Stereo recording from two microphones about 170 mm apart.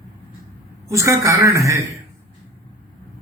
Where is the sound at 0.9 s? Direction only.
20° right (ahead or behind).